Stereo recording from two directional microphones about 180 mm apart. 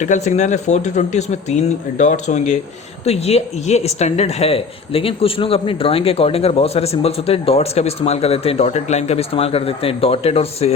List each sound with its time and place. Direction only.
0.0 s speech: 40° left (ahead or behind)